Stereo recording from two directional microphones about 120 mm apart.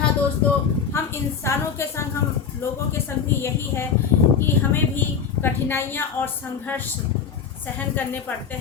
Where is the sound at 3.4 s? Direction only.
20° left (ahead or behind).